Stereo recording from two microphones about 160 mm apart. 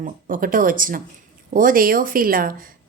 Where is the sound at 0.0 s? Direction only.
60° right (ahead or behind).